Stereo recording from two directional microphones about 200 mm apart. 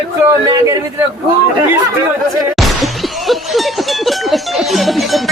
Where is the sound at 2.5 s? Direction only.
Centre (ahead or behind).